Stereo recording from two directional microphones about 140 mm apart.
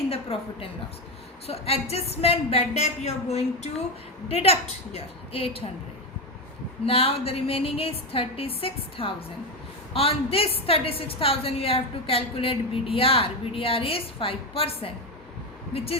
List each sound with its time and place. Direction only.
0.1 s a woman's voice: 45° left (ahead or behind)
6.8 s a woman's voice: 45° left (ahead or behind)